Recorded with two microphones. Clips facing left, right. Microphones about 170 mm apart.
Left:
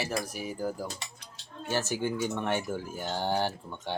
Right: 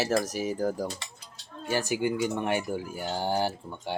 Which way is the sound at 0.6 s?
40° right (ahead or behind).